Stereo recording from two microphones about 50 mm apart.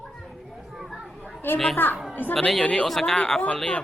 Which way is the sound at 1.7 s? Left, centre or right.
Left.